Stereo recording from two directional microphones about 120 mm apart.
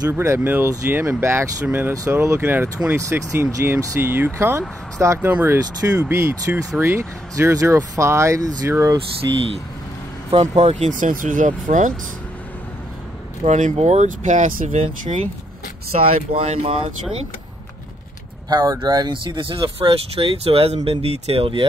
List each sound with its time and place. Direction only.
0.1 s speech: 20° right (ahead or behind)
5.3 s speech: 15° right (ahead or behind)
9.2 s speech: 35° right (ahead or behind)
10.3 s speech: 60° right (ahead or behind); by 11.9 s 90° right
13.4 s speech: 85° right
16.3 s speech: 50° right (ahead or behind)
18.5 s speech: 35° right (ahead or behind)